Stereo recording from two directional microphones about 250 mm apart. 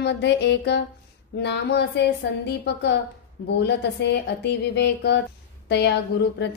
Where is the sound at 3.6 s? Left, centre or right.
Left.